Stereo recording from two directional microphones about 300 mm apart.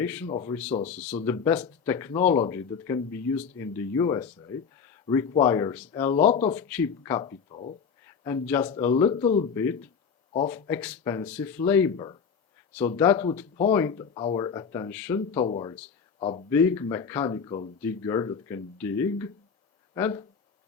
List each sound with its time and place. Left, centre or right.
0.0 s speech: centre
0.3 s speech: left
1.2 s speech: centre
6.1 s speech: left
6.6 s speech: centre
8.2 s speech: centre
10.7 s speech: centre